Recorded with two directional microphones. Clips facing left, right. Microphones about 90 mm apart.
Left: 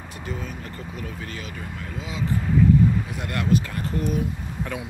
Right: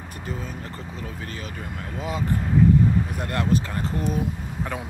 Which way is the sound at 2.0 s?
50° right (ahead or behind).